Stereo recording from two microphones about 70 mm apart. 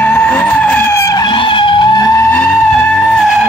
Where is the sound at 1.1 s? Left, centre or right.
Left.